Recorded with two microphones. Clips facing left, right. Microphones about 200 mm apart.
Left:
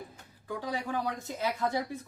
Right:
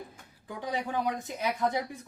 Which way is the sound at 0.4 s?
20° right (ahead or behind).